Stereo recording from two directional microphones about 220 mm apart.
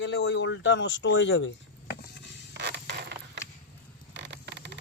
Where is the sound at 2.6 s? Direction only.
50° right (ahead or behind).